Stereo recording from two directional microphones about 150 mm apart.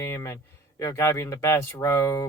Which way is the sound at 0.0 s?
15° left (ahead or behind).